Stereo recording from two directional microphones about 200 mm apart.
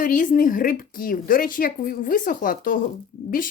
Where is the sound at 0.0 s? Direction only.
40° left (ahead or behind).